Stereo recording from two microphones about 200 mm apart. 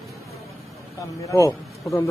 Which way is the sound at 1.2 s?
15° left (ahead or behind).